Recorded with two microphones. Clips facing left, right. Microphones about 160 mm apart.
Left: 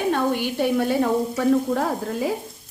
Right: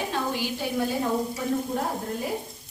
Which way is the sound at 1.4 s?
90° left.